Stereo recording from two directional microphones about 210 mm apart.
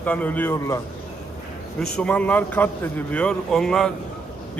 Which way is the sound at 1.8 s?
5° left (ahead or behind).